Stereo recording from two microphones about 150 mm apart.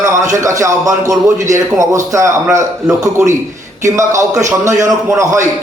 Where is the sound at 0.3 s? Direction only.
20° right (ahead or behind).